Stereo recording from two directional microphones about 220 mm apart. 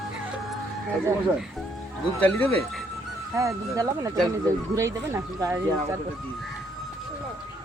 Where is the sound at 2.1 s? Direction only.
5° left (ahead or behind).